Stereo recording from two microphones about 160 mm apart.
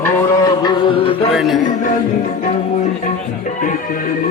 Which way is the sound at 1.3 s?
Centre (ahead or behind).